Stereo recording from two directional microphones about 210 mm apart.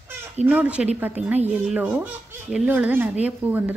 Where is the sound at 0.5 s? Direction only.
5° right (ahead or behind).